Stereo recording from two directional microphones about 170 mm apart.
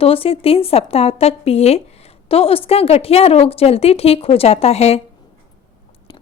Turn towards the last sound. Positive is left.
turn(degrees=40)  # may be behind; listen again after turning